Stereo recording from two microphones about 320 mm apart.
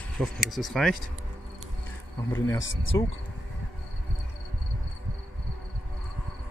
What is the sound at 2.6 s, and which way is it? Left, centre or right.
Speech, left.